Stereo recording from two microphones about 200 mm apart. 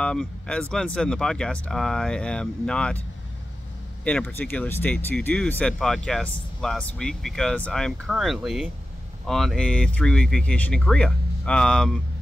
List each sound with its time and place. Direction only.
0.0 s speech: 5° left (ahead or behind)
4.0 s speech: 5° left (ahead or behind)